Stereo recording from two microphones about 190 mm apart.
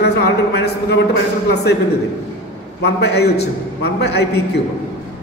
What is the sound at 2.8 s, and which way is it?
A man's voice, 60° left (ahead or behind).